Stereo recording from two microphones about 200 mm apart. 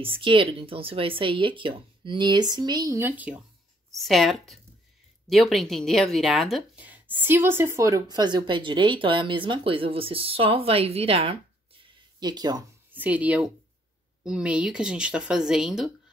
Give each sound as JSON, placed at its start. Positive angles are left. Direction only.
{"t": 0.0, "sound": "speech", "side_deg": -25}
{"t": 12.9, "sound": "speech", "side_deg": -10}